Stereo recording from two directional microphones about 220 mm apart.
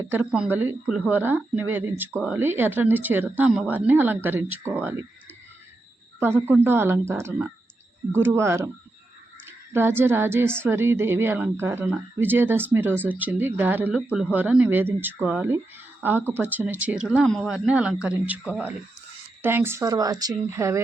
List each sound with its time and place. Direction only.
0.1 s a woman's voice: 5° right (ahead or behind)
6.1 s a woman's voice: 10° right (ahead or behind)